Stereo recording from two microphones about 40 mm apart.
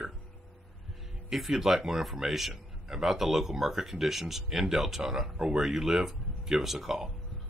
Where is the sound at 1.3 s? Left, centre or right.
Centre.